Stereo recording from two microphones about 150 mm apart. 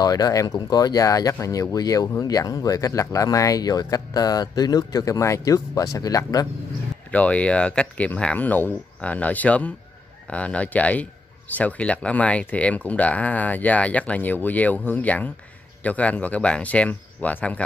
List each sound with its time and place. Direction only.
0.0 s speech: 25° left (ahead or behind)
7.1 s speech: 10° left (ahead or behind)